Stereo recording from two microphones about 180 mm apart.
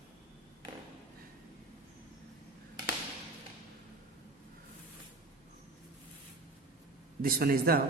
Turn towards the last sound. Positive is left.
turn(degrees=-55)  # may be behind; listen again after turning